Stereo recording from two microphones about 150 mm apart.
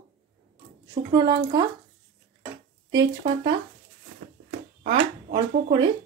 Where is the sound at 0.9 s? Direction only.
30° right (ahead or behind).